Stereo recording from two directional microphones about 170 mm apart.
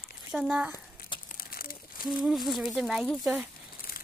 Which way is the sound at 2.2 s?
Centre (ahead or behind).